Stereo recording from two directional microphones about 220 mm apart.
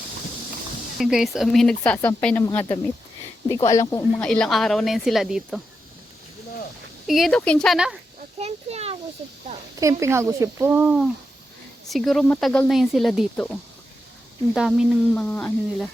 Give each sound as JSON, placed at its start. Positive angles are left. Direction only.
{"t": 0.9, "sound": "speech", "side_deg": 0}
{"t": 4.2, "sound": "speech", "side_deg": 5}
{"t": 7.1, "sound": "speech", "side_deg": 0}
{"t": 8.4, "sound": "children playing", "side_deg": -30}
{"t": 10.0, "sound": "speech", "side_deg": -15}